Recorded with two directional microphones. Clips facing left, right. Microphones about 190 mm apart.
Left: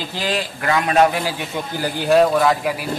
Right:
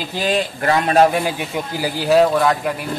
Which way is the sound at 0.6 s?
35° right (ahead or behind).